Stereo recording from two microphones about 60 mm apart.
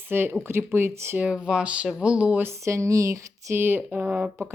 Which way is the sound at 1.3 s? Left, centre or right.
Centre.